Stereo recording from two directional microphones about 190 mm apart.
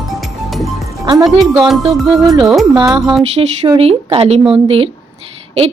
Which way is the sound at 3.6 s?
30° right (ahead or behind).